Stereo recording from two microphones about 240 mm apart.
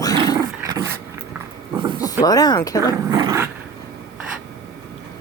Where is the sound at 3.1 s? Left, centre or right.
Centre.